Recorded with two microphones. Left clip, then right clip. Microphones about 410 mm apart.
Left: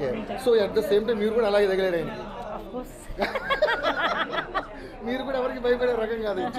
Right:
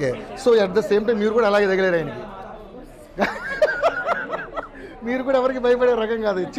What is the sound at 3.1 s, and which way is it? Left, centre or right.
Snicker, right.